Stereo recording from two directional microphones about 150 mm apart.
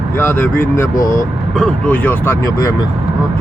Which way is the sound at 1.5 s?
5° left (ahead or behind).